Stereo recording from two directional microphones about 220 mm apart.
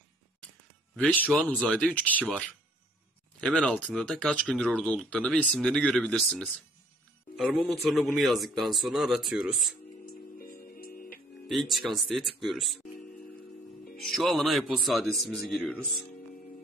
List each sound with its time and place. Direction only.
0.9 s speech: 5° left (ahead or behind)
10.3 s music: 40° left (ahead or behind)
11.4 s speech: centre (ahead or behind)
13.9 s speech: centre (ahead or behind)